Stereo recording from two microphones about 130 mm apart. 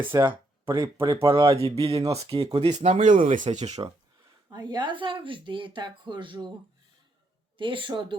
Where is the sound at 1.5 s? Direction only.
50° right (ahead or behind).